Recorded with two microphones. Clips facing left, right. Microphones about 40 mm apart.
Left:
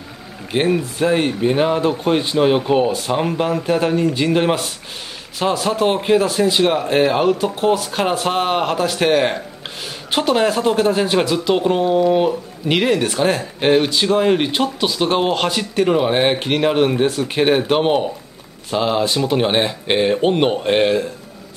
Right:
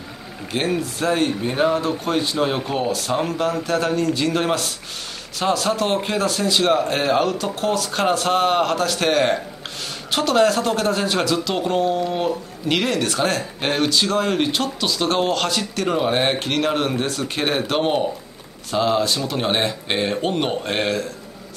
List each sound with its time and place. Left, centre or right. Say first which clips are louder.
0.5 s speech: left 5 dB; centre